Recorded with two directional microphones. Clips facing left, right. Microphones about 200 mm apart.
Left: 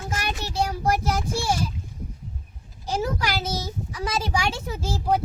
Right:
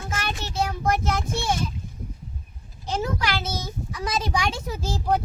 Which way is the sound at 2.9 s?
10° left (ahead or behind).